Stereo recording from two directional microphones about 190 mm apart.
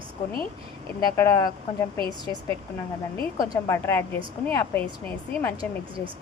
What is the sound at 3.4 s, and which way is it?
A woman's voice, 15° left (ahead or behind).